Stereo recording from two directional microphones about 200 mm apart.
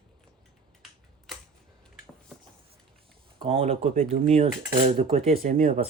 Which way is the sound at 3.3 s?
30° right (ahead or behind).